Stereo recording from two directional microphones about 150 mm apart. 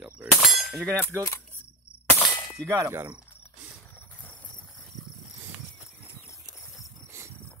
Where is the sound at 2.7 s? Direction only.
20° right (ahead or behind).